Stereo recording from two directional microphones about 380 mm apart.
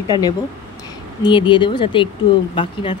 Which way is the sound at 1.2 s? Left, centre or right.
Centre.